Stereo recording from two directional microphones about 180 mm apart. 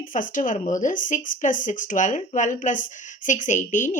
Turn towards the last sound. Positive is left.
turn(degrees=45)  # may be behind; listen again after turning